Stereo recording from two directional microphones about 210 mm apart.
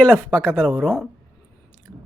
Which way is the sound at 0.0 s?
5° left (ahead or behind).